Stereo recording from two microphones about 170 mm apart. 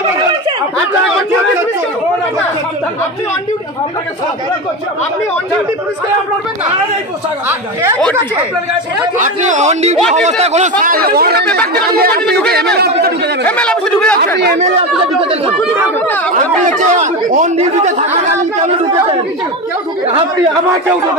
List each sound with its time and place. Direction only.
9.2 s speech: 45° right (ahead or behind)
10.8 s speech: 60° right (ahead or behind)
12.3 s speech: 5° left (ahead or behind)
12.7 s speech: 70° right (ahead or behind)
13.5 s a man's voice: 5° left (ahead or behind)
15.1 s speech: 30° right (ahead or behind)
16.6 s speech: 45° right (ahead or behind)